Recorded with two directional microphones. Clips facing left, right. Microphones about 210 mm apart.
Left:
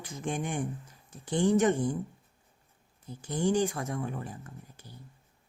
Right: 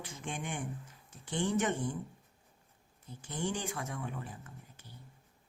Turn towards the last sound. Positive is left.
turn(degrees=40)  # may be behind; listen again after turning